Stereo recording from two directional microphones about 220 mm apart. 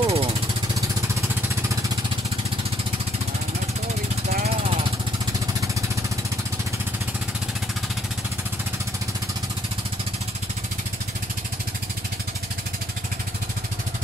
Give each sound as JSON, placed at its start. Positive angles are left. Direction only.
{"t": 0.0, "sound": "jackhammer", "side_deg": -25}